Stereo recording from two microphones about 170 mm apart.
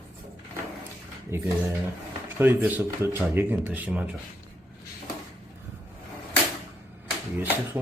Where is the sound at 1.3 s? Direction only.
15° right (ahead or behind).